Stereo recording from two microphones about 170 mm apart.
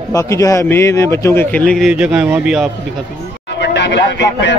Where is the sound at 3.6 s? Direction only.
90° left.